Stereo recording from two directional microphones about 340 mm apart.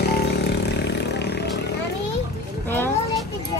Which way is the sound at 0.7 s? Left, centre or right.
Left.